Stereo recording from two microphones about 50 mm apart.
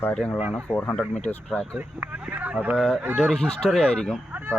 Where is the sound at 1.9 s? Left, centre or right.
Right.